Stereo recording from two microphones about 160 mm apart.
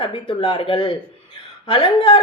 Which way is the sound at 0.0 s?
30° left (ahead or behind).